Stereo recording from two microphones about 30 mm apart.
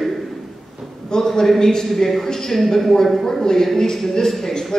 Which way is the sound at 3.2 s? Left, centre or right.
Centre.